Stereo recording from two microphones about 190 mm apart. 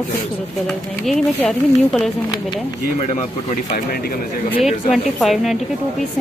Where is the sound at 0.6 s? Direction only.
Centre (ahead or behind).